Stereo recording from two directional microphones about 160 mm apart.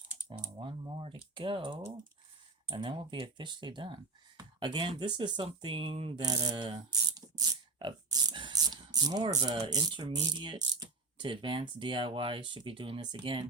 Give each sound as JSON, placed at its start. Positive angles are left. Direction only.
{"t": 0.4, "sound": "speech", "side_deg": -30}